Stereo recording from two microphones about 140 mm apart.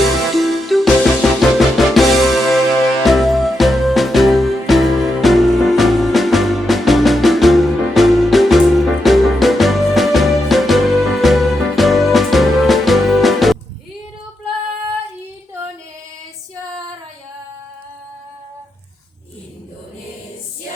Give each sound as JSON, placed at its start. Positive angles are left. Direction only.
{"t": 0.3, "sound": "music", "side_deg": 0}